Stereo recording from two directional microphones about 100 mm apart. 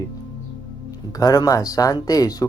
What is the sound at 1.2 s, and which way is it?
Speech, 40° left (ahead or behind).